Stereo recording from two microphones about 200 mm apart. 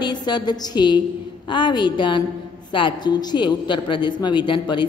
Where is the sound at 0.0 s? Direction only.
20° left (ahead or behind).